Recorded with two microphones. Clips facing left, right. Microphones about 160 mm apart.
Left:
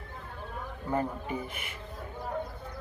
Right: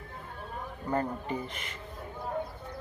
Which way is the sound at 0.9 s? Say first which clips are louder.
Even; 10° left (ahead or behind).